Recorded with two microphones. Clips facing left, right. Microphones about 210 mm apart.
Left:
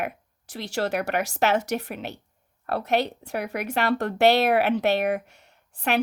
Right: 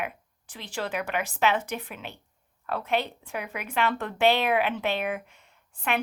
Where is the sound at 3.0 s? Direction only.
70° left (ahead or behind).